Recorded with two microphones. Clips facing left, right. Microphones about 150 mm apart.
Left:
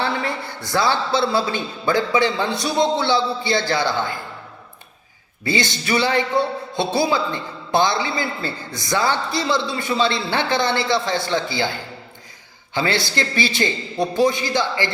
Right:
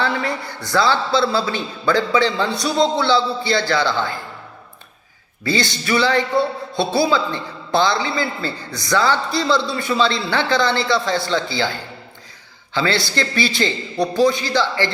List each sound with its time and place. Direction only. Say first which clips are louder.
0.0 s a sound: right 2 dB; 25° left (ahead or behind)
0.7 s a man's voice: right 2 dB; 20° left (ahead or behind)
5.4 s a man's voice: right 1 dB; 20° left (ahead or behind)
12.7 s a man's voice: right 1 dB; 20° left (ahead or behind)